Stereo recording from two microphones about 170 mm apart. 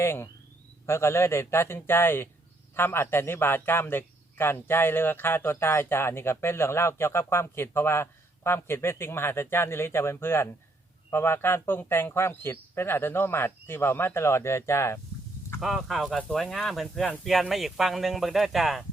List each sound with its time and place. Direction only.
0.0 s a man's voice: 15° left (ahead or behind)
15.6 s speech: centre (ahead or behind)